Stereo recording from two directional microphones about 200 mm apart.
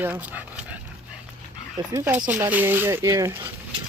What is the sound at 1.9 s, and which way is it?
Speech, 10° right (ahead or behind).